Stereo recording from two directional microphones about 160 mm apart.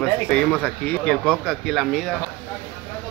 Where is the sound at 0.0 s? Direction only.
5° left (ahead or behind).